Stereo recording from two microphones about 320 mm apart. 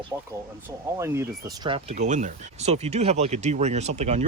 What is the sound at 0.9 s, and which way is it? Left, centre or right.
Speech, centre.